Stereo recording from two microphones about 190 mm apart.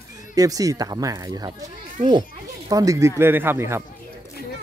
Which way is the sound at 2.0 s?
40° right (ahead or behind).